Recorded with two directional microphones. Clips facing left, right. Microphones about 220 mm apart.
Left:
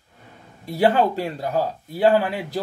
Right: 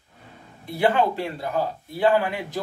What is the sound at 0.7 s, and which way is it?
Speech, 40° left (ahead or behind).